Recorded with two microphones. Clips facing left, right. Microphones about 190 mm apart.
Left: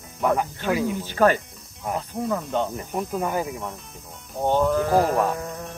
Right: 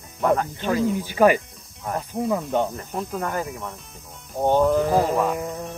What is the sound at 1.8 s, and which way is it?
Speech, 5° left (ahead or behind).